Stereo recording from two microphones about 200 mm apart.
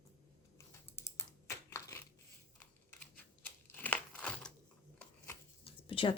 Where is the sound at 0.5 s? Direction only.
15° left (ahead or behind).